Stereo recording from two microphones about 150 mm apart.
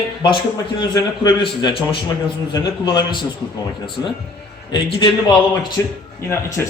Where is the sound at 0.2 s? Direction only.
30° left (ahead or behind).